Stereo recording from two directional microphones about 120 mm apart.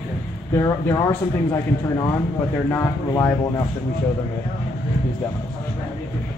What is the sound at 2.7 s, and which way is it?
Speech, 20° left (ahead or behind).